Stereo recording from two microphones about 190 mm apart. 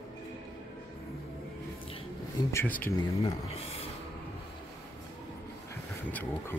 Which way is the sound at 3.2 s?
30° left (ahead or behind).